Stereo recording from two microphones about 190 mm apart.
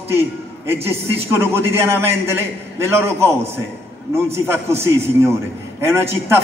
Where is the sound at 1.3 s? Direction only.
10° right (ahead or behind).